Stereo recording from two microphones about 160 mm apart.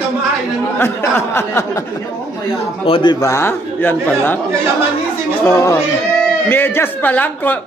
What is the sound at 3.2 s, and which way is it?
A man's voice, 15° left (ahead or behind).